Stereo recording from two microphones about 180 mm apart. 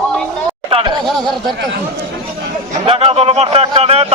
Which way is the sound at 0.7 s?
30° right (ahead or behind).